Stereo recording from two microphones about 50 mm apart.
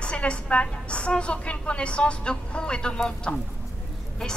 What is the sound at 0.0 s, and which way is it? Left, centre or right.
A woman's voice, left.